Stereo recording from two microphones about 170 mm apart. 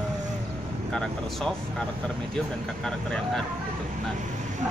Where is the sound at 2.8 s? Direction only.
5° left (ahead or behind).